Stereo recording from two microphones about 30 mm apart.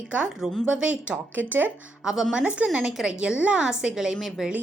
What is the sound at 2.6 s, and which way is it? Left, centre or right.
Speech, right.